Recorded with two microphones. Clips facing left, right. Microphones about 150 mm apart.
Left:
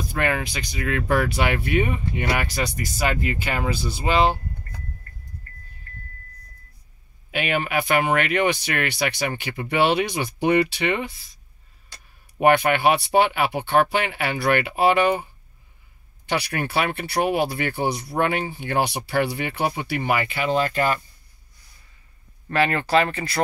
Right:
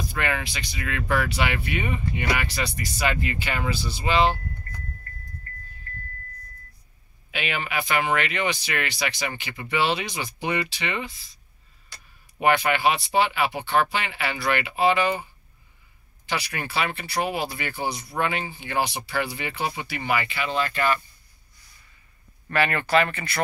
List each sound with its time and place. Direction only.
0.2 s speech: 45° left (ahead or behind)
7.2 s speech: 50° left (ahead or behind)
12.4 s speech: 50° left (ahead or behind)
16.3 s speech: 55° left (ahead or behind); by 21.0 s 40° left (ahead or behind)
22.5 s speech: 30° left (ahead or behind)